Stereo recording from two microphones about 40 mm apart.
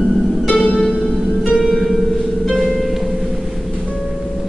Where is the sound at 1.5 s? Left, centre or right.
Centre.